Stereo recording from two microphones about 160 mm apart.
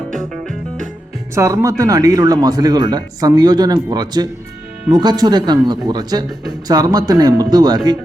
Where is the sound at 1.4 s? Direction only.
20° right (ahead or behind).